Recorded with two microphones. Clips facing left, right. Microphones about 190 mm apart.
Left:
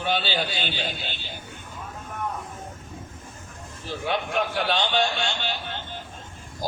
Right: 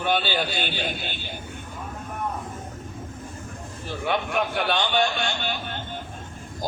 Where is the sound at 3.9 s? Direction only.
55° right (ahead or behind).